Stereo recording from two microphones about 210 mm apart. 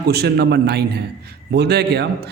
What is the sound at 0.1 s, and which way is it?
A man's voice, 50° right (ahead or behind).